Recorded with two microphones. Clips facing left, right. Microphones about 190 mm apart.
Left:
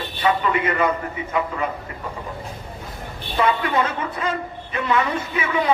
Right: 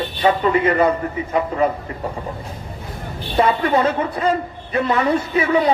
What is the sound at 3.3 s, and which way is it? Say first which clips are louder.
A man's voice: right 4 dB; 35° right (ahead or behind).